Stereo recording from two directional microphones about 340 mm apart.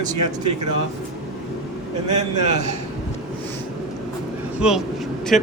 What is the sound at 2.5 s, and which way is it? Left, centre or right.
Speech, centre.